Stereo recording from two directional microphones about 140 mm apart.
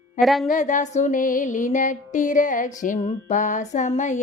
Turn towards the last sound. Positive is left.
turn(degrees=55)  # may be behind; listen again after turning